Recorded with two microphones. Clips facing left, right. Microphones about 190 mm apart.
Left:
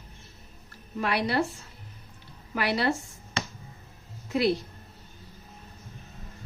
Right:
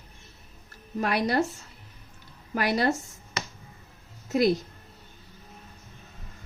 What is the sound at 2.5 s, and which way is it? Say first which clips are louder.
Speech: right 2 dB; 45° right (ahead or behind).